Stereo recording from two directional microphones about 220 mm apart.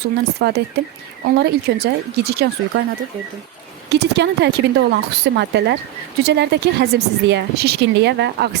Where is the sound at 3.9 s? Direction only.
50° right (ahead or behind).